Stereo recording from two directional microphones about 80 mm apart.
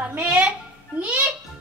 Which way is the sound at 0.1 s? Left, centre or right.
Centre.